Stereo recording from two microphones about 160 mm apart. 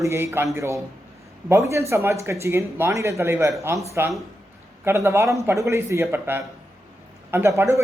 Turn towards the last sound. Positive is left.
turn(degrees=-15)  # may be behind; listen again after turning